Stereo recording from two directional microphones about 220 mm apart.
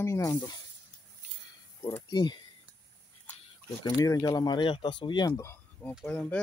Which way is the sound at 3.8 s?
15° left (ahead or behind).